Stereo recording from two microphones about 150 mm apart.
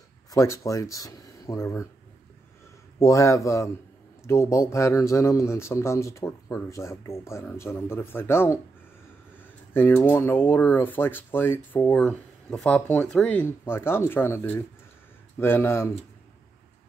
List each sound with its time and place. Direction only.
0.3 s speech: 20° left (ahead or behind)
3.0 s a man's voice: 20° left (ahead or behind)